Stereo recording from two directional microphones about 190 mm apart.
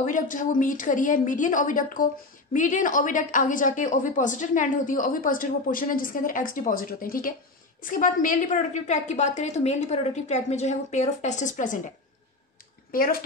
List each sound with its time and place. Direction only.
0.0 s a woman's voice: 45° left (ahead or behind)
12.9 s a woman's voice: 50° left (ahead or behind)